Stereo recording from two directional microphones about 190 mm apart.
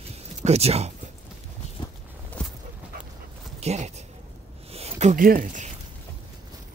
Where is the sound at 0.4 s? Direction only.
35° right (ahead or behind).